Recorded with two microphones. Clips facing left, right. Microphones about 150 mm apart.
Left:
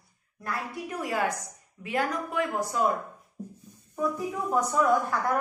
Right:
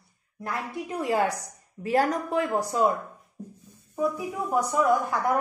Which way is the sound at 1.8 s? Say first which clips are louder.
Right 5 dB; 40° right (ahead or behind).